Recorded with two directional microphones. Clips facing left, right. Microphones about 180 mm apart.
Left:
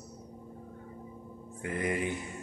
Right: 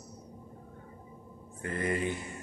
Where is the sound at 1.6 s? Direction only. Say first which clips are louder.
Even; 15° left (ahead or behind).